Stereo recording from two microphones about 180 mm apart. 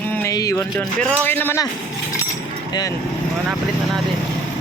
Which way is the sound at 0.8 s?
10° left (ahead or behind).